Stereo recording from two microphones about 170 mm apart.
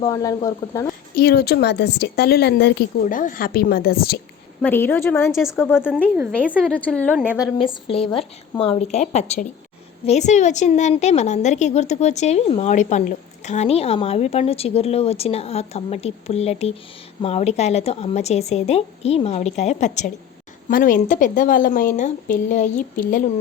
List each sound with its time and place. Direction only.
0.0 s speech: 20° left (ahead or behind)
1.1 s a woman's voice: 70° left (ahead or behind)
3.0 s speech: 50° left (ahead or behind)
4.6 s a woman's voice: 10° left (ahead or behind)
5.7 s a woman's voice: 5° right (ahead or behind)
6.7 s a woman's voice: 10° left (ahead or behind)
7.3 s a woman's voice: 5° right (ahead or behind)
7.6 s a woman's voice: 30° left (ahead or behind)
20.7 s a woman's voice: 55° left (ahead or behind)